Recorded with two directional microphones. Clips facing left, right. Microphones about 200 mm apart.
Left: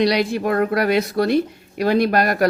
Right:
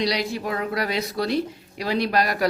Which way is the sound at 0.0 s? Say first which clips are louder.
Left 7 dB; 55° left (ahead or behind).